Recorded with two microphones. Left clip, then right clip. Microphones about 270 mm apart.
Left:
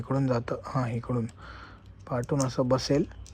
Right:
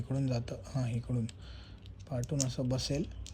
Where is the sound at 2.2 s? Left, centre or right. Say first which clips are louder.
Left 9 dB; centre.